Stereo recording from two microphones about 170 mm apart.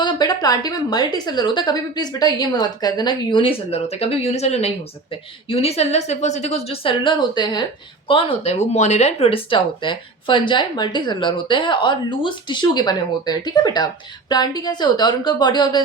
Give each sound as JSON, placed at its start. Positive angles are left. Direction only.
{"t": 0.0, "sound": "speech", "side_deg": 25}